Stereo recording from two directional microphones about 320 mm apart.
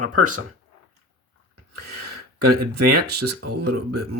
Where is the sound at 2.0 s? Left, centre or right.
Right.